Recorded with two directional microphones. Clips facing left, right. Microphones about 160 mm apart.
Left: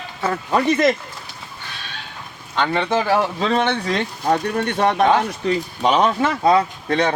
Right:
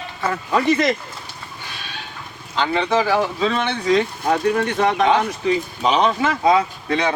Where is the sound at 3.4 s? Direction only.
50° left (ahead or behind).